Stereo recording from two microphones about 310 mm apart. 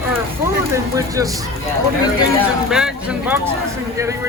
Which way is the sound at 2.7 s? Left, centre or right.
Centre.